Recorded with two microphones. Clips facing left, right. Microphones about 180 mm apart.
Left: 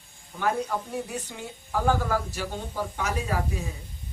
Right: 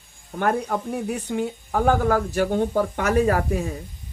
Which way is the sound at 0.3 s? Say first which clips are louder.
Right 4 dB; 60° right (ahead or behind).